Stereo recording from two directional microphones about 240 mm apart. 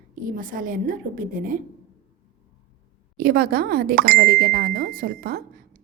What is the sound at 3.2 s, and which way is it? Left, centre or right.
Speech, right.